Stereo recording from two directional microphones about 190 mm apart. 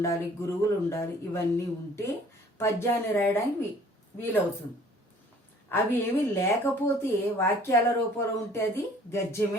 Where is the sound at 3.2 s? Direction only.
10° left (ahead or behind).